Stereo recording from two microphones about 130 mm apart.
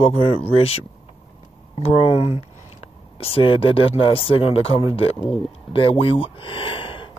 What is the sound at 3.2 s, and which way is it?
Speech, 45° left (ahead or behind).